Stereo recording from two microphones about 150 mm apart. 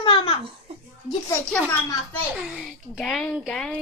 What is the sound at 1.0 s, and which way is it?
A child's voice, 5° left (ahead or behind).